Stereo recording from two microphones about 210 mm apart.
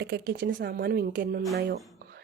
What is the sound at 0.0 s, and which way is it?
Speech, 55° right (ahead or behind).